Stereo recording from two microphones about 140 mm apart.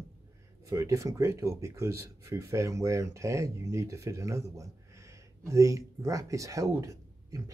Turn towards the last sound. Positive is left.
turn(degrees=-25)  # may be behind; listen again after turning